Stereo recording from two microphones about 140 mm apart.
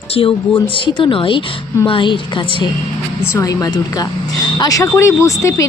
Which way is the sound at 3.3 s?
25° left (ahead or behind).